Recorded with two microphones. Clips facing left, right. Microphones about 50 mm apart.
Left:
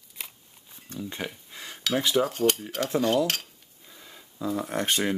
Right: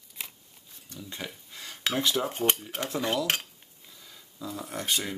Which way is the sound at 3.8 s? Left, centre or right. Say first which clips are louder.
Left 4 dB; left.